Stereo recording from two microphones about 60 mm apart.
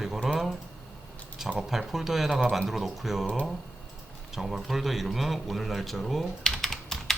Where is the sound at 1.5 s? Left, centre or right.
Centre.